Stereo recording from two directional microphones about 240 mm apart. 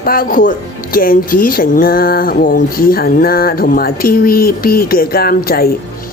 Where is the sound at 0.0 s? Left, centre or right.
Left.